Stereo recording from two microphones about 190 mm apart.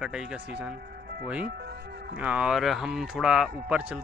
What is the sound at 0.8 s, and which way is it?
Music, 55° right (ahead or behind).